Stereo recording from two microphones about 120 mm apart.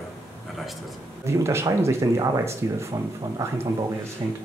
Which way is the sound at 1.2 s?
20° right (ahead or behind).